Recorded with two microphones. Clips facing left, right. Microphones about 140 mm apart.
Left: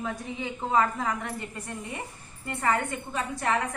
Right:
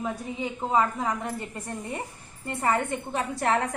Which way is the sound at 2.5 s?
30° right (ahead or behind).